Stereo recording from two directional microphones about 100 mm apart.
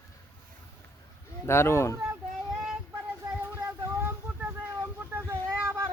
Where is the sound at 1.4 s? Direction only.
25° left (ahead or behind).